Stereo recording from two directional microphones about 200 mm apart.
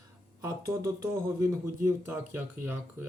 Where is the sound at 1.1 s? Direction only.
15° right (ahead or behind).